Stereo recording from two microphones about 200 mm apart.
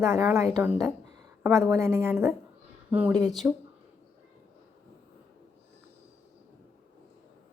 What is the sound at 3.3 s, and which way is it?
Speech, centre (ahead or behind).